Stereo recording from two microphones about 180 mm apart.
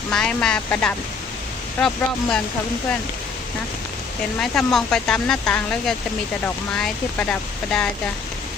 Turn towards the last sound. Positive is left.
turn(degrees=5)  # may be behind; listen again after turning